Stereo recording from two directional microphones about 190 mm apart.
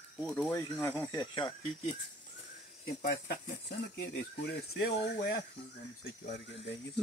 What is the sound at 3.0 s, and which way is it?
Speech, 55° left (ahead or behind).